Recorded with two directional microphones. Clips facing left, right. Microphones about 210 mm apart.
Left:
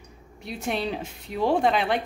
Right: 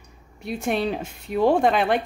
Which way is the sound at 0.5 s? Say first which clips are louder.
Right 4 dB; 50° right (ahead or behind).